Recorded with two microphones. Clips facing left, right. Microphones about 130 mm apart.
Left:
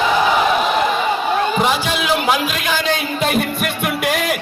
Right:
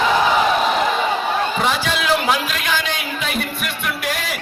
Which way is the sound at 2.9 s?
45° left (ahead or behind).